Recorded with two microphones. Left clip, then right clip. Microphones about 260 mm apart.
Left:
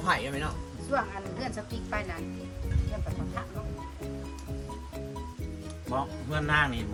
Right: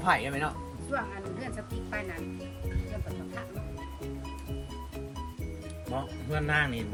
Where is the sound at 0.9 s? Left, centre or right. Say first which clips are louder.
Left 4 dB; left.